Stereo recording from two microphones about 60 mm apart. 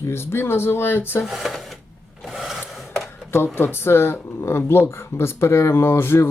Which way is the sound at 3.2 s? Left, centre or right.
Left.